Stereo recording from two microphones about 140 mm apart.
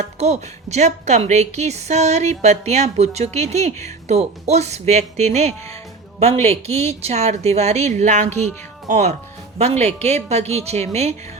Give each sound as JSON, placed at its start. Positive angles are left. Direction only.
{"t": 0.0, "sound": "a woman's voice", "side_deg": -55}